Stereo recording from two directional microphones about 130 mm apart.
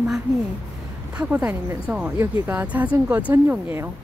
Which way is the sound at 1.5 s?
10° right (ahead or behind).